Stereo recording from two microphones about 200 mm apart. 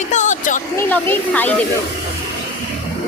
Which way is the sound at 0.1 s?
35° left (ahead or behind).